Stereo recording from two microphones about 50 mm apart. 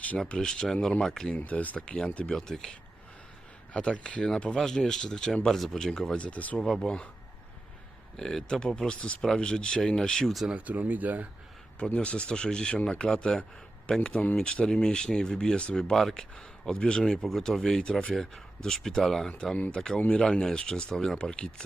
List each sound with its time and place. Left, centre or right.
0.3 s speech: centre
1.4 s speech: left
2.3 s speech: centre
3.7 s speech: left
6.6 s speech: centre
6.8 s speech: centre
8.1 s speech: centre
10.5 s speech: right
11.9 s speech: left; by 21.2 s centre
21.2 s speech: centre